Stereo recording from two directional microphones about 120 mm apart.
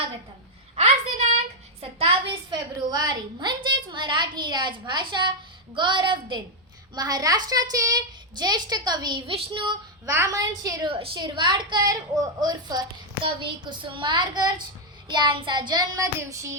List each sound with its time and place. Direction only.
0.8 s a sound: 65° right (ahead or behind)
1.8 s a sound: 55° right (ahead or behind)
2.5 s a woman's voice: 35° right (ahead or behind)
9.3 s child singing: 50° right (ahead or behind)
10.1 s a woman's voice: 25° right (ahead or behind)
10.8 s a woman's voice: 50° right (ahead or behind); by 16.6 s 25° right (ahead or behind)